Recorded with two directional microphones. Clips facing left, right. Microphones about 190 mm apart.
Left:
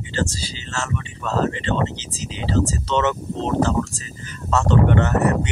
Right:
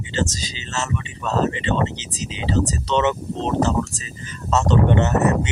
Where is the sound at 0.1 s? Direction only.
20° right (ahead or behind).